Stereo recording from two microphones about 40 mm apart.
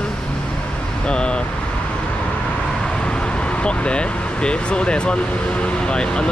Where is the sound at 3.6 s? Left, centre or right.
Left.